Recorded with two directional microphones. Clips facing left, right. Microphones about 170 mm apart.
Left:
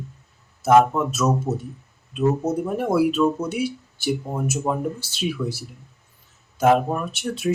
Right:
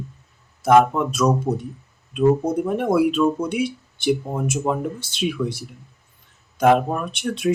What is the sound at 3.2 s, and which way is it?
Speech, 10° right (ahead or behind).